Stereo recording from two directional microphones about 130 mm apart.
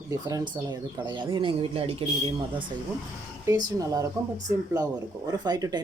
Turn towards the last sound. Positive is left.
turn(degrees=-30)  # may be behind; listen again after turning